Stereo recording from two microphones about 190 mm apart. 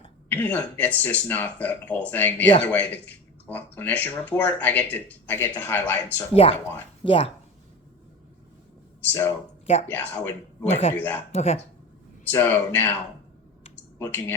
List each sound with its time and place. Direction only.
0.3 s speech: 10° left (ahead or behind)
6.3 s speech: 30° left (ahead or behind)
9.0 s speech: 10° left (ahead or behind)
10.6 s speech: 35° left (ahead or behind)
10.9 s speech: 10° left (ahead or behind)
11.3 s speech: 35° left (ahead or behind)
12.2 s speech: 10° left (ahead or behind)
14.0 s speech: 10° left (ahead or behind)